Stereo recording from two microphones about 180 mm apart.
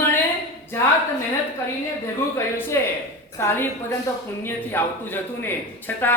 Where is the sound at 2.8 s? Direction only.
15° left (ahead or behind).